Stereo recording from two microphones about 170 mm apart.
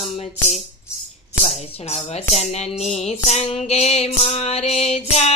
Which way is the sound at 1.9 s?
40° left (ahead or behind).